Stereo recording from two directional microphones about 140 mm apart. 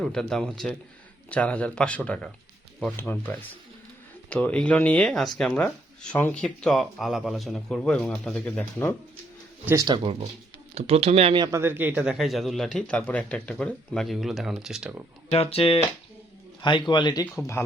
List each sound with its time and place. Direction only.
0.0 s speech: 5° left (ahead or behind)
9.8 s speech: 35° right (ahead or behind)
11.3 s speech: 30° right (ahead or behind)
11.6 s speech: 15° right (ahead or behind)
15.3 s speech: 45° left (ahead or behind); by 17.6 s 20° left (ahead or behind)